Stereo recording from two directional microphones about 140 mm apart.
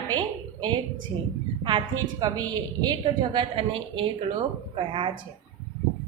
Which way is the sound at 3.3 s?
40° right (ahead or behind).